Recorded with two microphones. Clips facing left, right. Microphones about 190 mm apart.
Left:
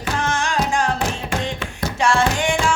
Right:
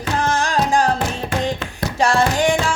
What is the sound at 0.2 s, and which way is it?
Music, 35° right (ahead or behind).